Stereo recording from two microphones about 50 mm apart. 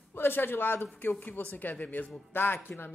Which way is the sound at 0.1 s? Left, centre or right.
Left.